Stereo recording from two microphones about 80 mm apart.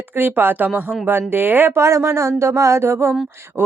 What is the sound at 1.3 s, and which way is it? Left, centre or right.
Speech, right.